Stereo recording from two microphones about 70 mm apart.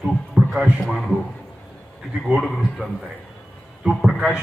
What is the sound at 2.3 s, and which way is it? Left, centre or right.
Speech, centre.